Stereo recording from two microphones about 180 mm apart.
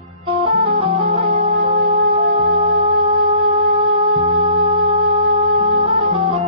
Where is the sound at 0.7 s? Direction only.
30° right (ahead or behind).